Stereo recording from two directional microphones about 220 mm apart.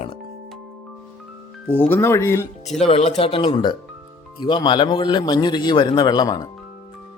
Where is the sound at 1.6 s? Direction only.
10° left (ahead or behind).